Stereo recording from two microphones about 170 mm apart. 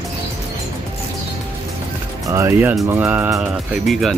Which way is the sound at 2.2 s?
15° right (ahead or behind).